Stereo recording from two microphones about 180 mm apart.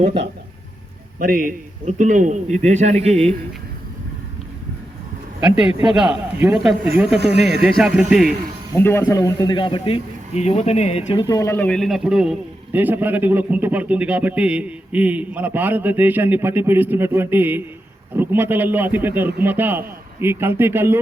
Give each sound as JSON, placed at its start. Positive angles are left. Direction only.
{"t": 1.2, "sound": "a man's voice", "side_deg": -50}
{"t": 5.5, "sound": "speech", "side_deg": -5}
{"t": 7.2, "sound": "speech", "side_deg": -70}
{"t": 7.6, "sound": "speech", "side_deg": -5}
{"t": 8.8, "sound": "a man's voice", "side_deg": 10}